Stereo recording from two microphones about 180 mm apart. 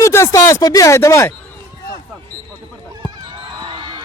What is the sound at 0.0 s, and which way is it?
A man's voice, 15° left (ahead or behind).